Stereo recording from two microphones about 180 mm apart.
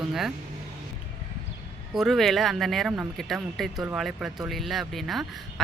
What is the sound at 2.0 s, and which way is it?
Speech, centre (ahead or behind).